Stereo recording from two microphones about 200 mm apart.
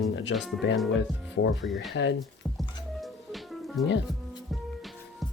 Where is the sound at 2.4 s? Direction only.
Centre (ahead or behind).